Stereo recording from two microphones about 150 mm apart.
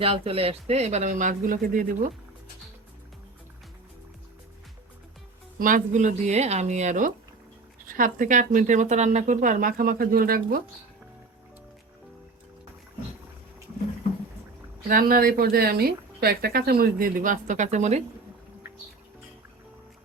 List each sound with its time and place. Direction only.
0.0 s speech: 40° right (ahead or behind); by 2.0 s 65° right (ahead or behind)
5.5 s speech: 60° right (ahead or behind)
7.9 s speech: 65° right (ahead or behind)
14.8 s speech: 70° right (ahead or behind); by 18.0 s 50° right (ahead or behind)